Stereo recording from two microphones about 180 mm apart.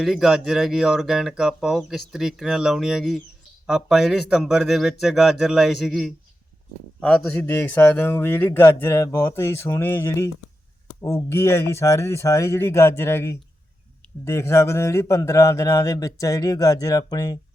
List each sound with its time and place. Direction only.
0.0 s speech: centre (ahead or behind); by 17.3 s 20° left (ahead or behind)